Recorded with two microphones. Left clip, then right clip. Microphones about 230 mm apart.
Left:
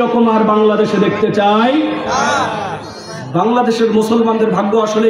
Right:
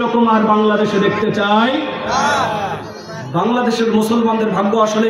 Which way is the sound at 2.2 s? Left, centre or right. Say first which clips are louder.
Even; centre.